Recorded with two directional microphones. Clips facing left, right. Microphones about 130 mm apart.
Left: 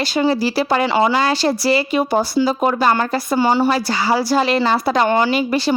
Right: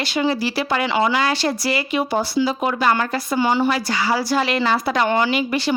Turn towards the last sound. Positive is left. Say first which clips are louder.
# left 3 dB
turn(degrees=35)  # may be behind; listen again after turning